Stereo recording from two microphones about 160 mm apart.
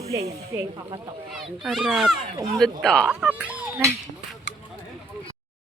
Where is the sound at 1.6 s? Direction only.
Centre (ahead or behind).